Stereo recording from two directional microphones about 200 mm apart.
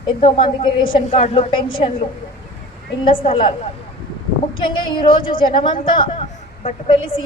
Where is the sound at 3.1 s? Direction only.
25° left (ahead or behind).